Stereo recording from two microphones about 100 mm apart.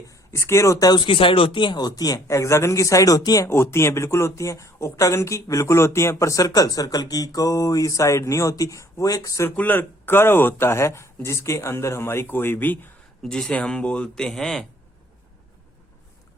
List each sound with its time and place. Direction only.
0.1 s speech: 30° left (ahead or behind)
3.5 s speech: 25° left (ahead or behind)
9.6 s speech: 20° left (ahead or behind)
13.2 s a man's voice: 5° left (ahead or behind)